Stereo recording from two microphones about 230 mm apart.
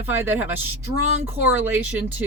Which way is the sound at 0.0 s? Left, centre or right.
Centre.